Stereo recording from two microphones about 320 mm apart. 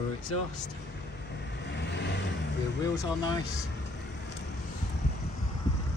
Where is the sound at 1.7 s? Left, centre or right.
Left.